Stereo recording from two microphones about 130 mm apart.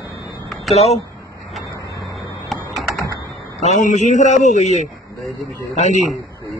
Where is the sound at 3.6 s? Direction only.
65° left (ahead or behind).